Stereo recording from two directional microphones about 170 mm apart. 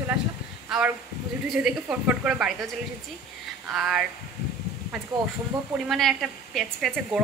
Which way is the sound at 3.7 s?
5° right (ahead or behind).